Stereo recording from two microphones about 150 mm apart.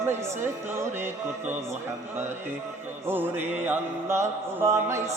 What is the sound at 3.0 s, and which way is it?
Music, 15° right (ahead or behind).